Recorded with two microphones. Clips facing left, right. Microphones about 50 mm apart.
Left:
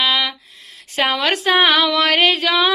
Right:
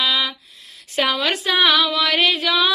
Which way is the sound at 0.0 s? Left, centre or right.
Left.